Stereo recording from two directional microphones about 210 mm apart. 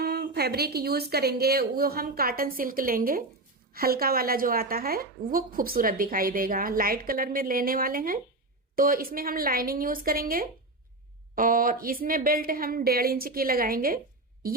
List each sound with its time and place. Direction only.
0.0 s a woman's voice: 45° right (ahead or behind)